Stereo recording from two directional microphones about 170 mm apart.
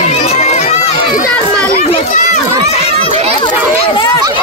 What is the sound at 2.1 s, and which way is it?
Run, 45° left (ahead or behind).